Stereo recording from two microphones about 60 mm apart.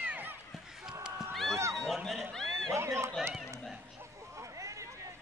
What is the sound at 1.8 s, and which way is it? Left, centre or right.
Run, centre.